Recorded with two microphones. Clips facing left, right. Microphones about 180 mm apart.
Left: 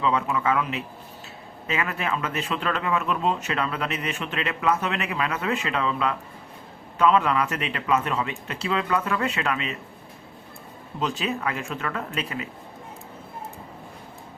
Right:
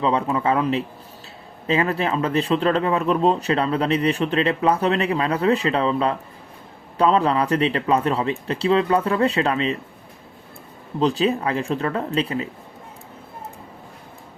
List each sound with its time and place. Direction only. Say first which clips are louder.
0.0 s speech: right 3 dB; 35° right (ahead or behind)
11.0 s speech: right 7 dB; 35° right (ahead or behind)